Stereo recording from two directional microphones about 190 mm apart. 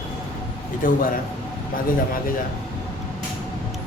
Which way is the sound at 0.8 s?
45° left (ahead or behind).